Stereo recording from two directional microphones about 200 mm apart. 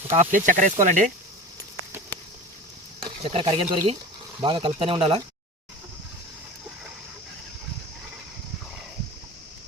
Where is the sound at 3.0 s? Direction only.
25° right (ahead or behind).